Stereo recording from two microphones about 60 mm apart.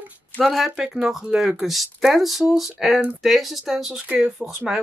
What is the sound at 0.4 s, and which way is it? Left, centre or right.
Speech, centre.